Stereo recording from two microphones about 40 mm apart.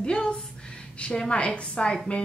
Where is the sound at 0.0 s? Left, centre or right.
Left.